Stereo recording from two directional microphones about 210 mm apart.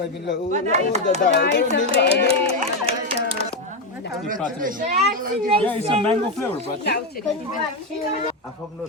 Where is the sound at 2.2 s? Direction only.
30° right (ahead or behind).